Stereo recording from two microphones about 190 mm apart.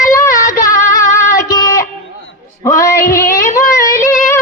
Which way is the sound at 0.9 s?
15° left (ahead or behind).